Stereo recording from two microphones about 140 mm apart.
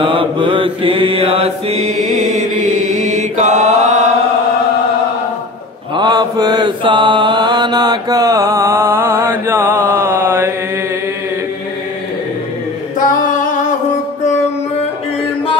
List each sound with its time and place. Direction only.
0.0 s mantra: 40° right (ahead or behind); by 4.1 s 55° right (ahead or behind)
5.9 s mantra: 30° right (ahead or behind); by 10.5 s 15° right (ahead or behind)
13.0 s singing: 70° left (ahead or behind)